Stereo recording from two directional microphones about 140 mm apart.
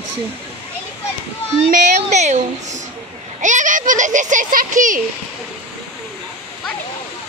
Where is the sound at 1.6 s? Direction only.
60° right (ahead or behind).